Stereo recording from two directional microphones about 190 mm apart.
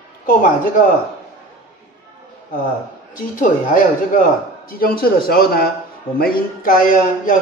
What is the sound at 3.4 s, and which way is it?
Speech, 45° left (ahead or behind).